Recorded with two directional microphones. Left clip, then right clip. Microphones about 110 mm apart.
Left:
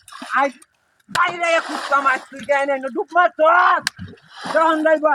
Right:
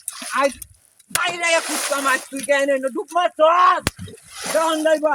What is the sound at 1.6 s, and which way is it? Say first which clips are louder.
Speech: right 1 dB; 10° left (ahead or behind).